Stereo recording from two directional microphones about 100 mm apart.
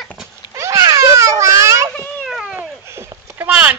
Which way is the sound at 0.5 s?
30° right (ahead or behind).